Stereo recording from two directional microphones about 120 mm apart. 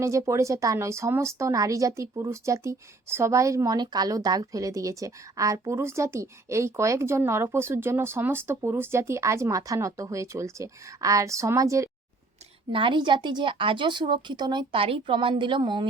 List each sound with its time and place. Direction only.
0.0 s speech: 25° right (ahead or behind)
12.7 s a woman's voice: 45° right (ahead or behind)